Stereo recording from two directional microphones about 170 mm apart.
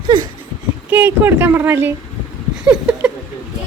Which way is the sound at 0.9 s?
10° right (ahead or behind).